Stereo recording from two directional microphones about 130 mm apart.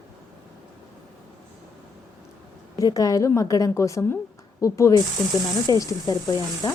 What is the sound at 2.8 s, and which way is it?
Speech, 25° left (ahead or behind).